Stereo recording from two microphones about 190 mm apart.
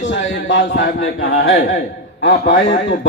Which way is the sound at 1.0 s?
90° left.